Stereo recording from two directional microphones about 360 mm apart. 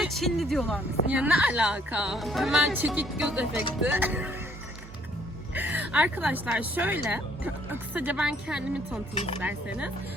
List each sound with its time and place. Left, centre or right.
0.0 s speech: centre
5.5 s speech: centre
9.1 s speech: centre
9.4 s speech: centre